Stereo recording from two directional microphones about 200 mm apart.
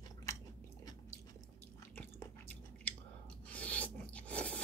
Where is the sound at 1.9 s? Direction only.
10° left (ahead or behind).